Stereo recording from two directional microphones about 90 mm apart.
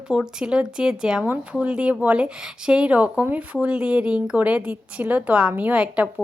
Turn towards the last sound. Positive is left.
turn(degrees=-10)  # may be behind; listen again after turning